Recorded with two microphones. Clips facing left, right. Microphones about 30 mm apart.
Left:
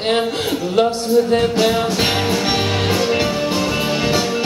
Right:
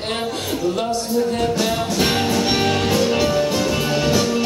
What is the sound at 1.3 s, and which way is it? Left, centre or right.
Music, left.